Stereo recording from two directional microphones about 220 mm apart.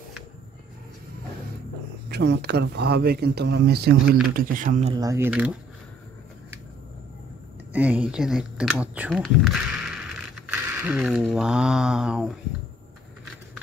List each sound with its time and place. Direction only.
2.0 s a man's voice: 50° right (ahead or behind); by 5.0 s 30° right (ahead or behind)
5.0 s speech: 10° right (ahead or behind)
7.7 s speech: 5° right (ahead or behind)